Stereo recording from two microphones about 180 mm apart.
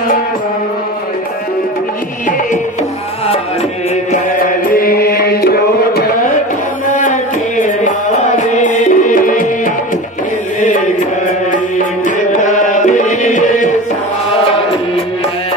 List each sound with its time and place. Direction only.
4.1 s music: 50° left (ahead or behind)
6.9 s music: 45° left (ahead or behind)
12.3 s music: 45° left (ahead or behind)